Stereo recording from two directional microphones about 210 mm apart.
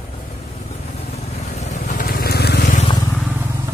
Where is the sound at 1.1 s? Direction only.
30° left (ahead or behind).